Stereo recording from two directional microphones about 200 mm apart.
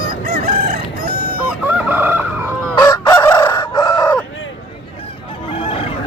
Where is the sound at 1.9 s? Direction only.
10° right (ahead or behind).